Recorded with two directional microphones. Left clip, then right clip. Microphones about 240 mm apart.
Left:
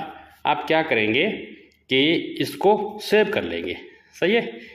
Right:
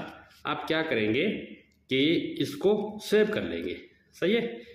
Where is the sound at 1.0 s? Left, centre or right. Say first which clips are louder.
Left 7 dB; left.